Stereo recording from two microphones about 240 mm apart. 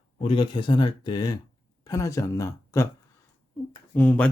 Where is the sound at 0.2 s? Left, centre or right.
Left.